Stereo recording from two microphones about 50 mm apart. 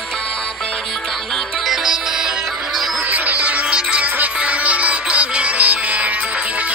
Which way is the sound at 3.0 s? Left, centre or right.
Right.